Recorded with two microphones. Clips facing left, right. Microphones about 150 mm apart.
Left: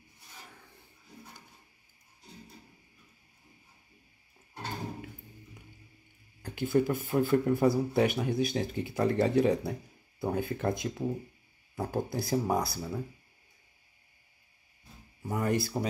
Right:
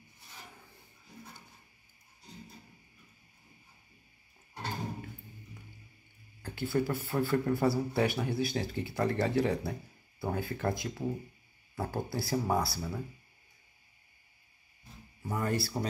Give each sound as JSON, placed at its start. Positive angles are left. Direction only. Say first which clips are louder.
{"t": 6.4, "sound": "speech", "louder": "left 4 dB", "side_deg": 20}
{"t": 15.2, "sound": "speech", "louder": "left 3 dB", "side_deg": 15}